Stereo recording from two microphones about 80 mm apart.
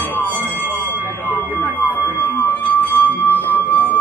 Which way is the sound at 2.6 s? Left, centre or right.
Left.